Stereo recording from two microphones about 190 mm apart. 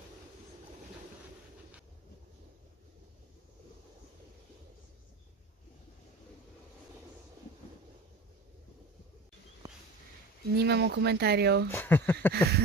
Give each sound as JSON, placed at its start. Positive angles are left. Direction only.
{"t": 10.5, "sound": "speech", "side_deg": -60}
{"t": 11.7, "sound": "speech", "side_deg": 10}